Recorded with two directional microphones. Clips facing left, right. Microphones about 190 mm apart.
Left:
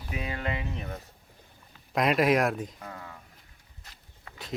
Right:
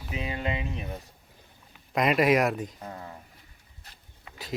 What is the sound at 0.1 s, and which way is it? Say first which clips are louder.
Speech: right 2 dB; 20° right (ahead or behind).